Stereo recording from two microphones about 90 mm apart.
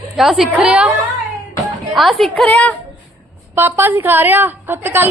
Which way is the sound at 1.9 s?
Centre (ahead or behind).